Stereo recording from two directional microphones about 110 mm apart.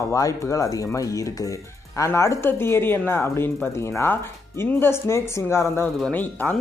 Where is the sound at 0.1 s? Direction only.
30° left (ahead or behind).